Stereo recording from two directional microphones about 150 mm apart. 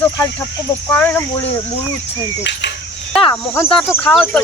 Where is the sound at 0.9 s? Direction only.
10° left (ahead or behind).